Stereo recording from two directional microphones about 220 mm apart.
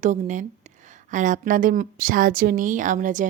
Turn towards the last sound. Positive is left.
turn(degrees=-35)  # may be behind; listen again after turning